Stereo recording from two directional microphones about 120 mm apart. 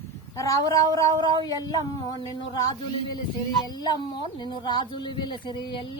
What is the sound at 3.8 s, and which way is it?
Speech, 35° left (ahead or behind).